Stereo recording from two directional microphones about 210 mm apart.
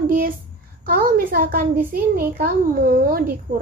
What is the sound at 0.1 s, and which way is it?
A child's voice, 40° right (ahead or behind).